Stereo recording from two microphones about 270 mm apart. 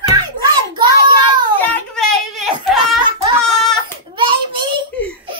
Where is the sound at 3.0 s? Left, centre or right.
Centre.